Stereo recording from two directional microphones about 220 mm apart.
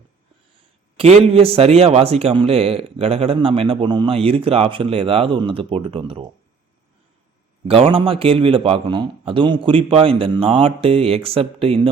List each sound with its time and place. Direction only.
0.9 s a man's voice: 25° right (ahead or behind)
7.7 s a man's voice: 25° right (ahead or behind)